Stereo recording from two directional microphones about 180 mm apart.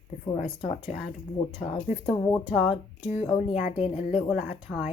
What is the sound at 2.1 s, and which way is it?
Speech, 15° left (ahead or behind).